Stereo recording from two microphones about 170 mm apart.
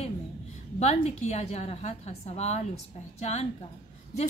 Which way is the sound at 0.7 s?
40° left (ahead or behind).